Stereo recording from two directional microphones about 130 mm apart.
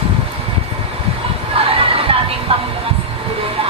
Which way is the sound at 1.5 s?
45° right (ahead or behind).